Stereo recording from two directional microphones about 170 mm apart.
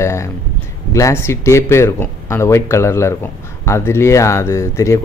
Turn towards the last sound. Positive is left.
turn(degrees=15)  # may be behind; listen again after turning